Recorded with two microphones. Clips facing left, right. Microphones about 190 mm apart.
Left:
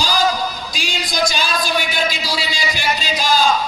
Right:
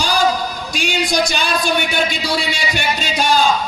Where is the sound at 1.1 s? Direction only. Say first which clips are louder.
Left 2 dB; 65° right (ahead or behind).